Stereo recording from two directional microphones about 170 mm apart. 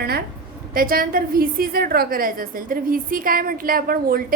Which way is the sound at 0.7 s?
55° right (ahead or behind).